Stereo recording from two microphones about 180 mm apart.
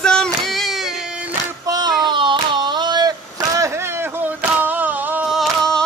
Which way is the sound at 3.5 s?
15° right (ahead or behind).